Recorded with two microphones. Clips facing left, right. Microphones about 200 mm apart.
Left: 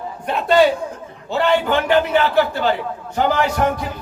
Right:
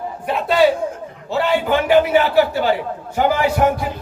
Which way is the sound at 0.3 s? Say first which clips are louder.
Left 3 dB; 5° right (ahead or behind).